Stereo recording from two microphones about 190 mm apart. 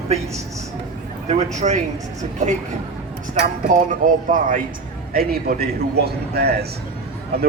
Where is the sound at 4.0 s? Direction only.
45° right (ahead or behind).